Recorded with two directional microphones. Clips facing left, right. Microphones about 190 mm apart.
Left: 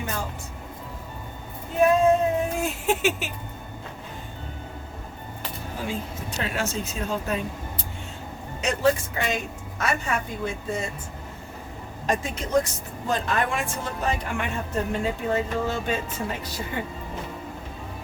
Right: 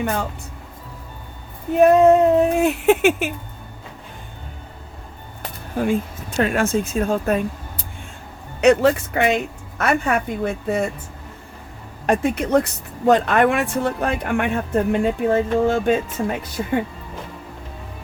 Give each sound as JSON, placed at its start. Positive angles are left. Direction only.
{"t": 0.0, "sound": "speech", "side_deg": -65}
{"t": 1.8, "sound": "speech", "side_deg": -65}
{"t": 5.4, "sound": "speech", "side_deg": -55}
{"t": 8.6, "sound": "speech", "side_deg": -65}
{"t": 12.0, "sound": "speech", "side_deg": -60}